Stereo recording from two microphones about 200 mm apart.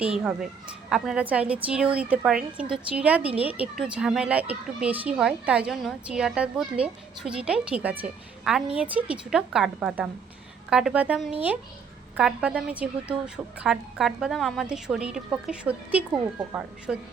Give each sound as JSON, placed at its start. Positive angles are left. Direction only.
{"t": 0.0, "sound": "a woman's voice", "side_deg": -5}